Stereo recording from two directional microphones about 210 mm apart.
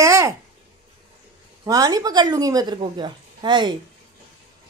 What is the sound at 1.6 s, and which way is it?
A woman's voice, 15° right (ahead or behind).